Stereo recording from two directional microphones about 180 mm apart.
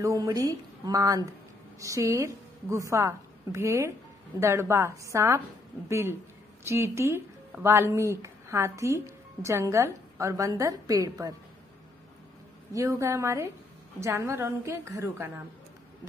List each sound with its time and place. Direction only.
0.0 s a woman's voice: 20° right (ahead or behind)
12.7 s a woman's voice: 15° right (ahead or behind)